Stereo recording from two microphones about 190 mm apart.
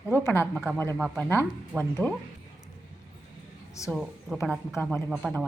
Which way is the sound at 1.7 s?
15° right (ahead or behind).